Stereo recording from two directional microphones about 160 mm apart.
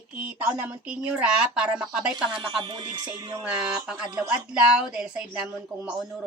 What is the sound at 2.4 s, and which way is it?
Speech, 30° right (ahead or behind).